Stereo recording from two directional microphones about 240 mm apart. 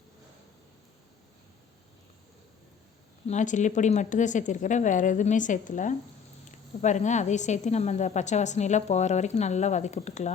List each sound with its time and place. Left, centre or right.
3.2 s a woman's voice: left